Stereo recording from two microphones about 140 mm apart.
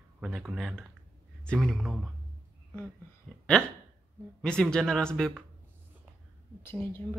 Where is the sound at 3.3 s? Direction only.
Centre (ahead or behind).